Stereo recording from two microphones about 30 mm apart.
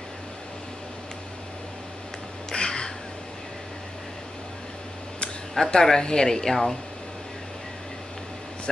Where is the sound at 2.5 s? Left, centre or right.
Left.